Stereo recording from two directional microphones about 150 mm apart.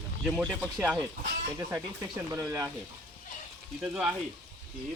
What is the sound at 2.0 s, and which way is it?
Speech, 25° right (ahead or behind).